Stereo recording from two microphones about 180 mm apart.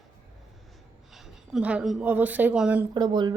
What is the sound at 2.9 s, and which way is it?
Speech, 25° right (ahead or behind).